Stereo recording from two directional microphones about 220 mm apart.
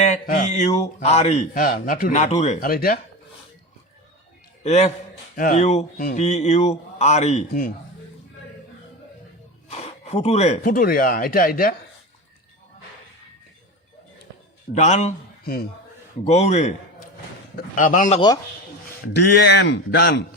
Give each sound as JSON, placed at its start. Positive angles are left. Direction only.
{"t": 0.1, "sound": "speech", "side_deg": 35}
{"t": 4.6, "sound": "speech", "side_deg": 30}
{"t": 9.6, "sound": "speech", "side_deg": 30}
{"t": 14.7, "sound": "a man's voice", "side_deg": 30}
{"t": 19.0, "sound": "a man's voice", "side_deg": 50}